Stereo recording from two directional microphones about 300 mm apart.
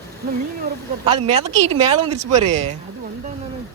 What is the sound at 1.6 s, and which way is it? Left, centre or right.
Speech, right.